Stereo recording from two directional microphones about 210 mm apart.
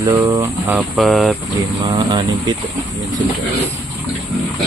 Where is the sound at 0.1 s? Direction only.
15° right (ahead or behind); by 1.4 s centre (ahead or behind).